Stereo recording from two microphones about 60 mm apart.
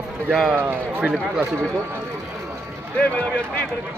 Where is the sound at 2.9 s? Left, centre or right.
Left.